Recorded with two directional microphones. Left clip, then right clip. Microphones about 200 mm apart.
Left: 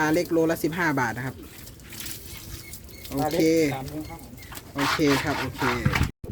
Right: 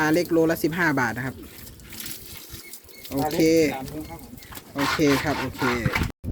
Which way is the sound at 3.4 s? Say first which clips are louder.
Right 3 dB; 15° right (ahead or behind).